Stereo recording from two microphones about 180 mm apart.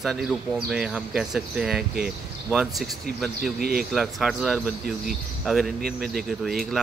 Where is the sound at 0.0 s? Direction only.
Centre (ahead or behind).